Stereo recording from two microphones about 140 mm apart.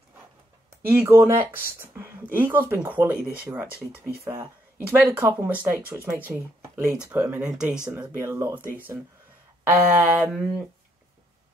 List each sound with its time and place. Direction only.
0.8 s speech: 15° right (ahead or behind)
4.2 s speech: 20° right (ahead or behind)
8.2 s speech: 20° right (ahead or behind)
9.7 s speech: 15° right (ahead or behind)